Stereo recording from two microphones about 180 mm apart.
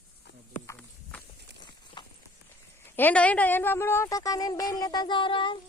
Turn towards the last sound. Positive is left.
turn(degrees=25)  # may be behind; listen again after turning